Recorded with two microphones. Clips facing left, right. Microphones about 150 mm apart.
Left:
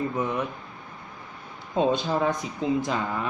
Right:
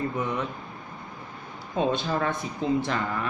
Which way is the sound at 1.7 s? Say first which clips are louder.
Left 2 dB; 25° left (ahead or behind).